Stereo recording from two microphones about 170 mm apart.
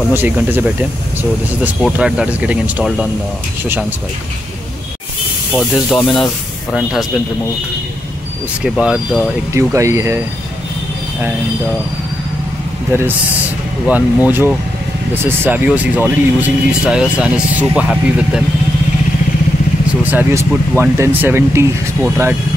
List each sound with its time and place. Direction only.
0.1 s speech: 10° right (ahead or behind)
1.9 s speech: 5° right (ahead or behind)
5.9 s speech: 5° left (ahead or behind)
8.6 s speech: 5° right (ahead or behind)
9.5 s speech: 15° right (ahead or behind)
13.8 s speech: 10° right (ahead or behind)
20.0 s speech: 10° right (ahead or behind)